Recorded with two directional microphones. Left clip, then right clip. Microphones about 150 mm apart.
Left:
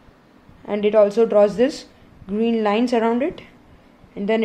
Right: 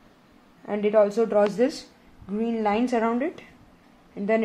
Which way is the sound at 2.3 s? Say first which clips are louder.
Left 5 dB; 30° left (ahead or behind).